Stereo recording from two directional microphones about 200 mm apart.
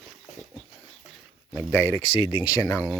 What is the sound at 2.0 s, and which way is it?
Speech, 25° left (ahead or behind).